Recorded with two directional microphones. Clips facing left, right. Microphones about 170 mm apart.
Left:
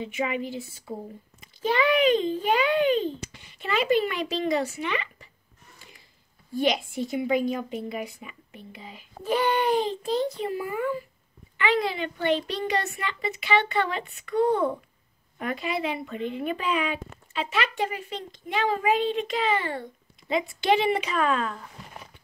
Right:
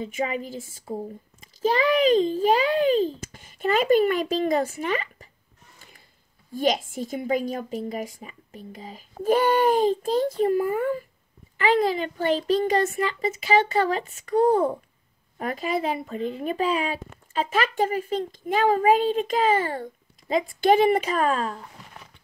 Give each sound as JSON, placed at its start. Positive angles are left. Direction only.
{"t": 0.0, "sound": "speech", "side_deg": -40}
{"t": 6.5, "sound": "a child's voice", "side_deg": -45}